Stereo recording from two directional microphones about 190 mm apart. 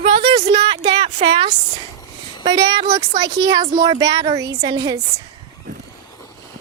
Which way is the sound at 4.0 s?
20° right (ahead or behind).